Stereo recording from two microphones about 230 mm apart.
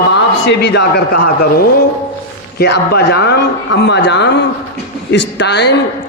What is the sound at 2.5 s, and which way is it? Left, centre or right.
A man's voice, left.